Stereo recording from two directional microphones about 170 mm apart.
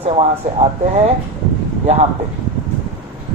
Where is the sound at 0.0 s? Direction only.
35° right (ahead or behind).